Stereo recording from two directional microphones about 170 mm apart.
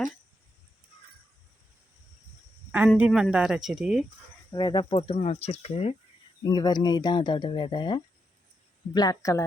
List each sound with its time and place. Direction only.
3.1 s speech: 5° right (ahead or behind)
4.5 s speech: 25° left (ahead or behind)
6.4 s speech: 25° left (ahead or behind)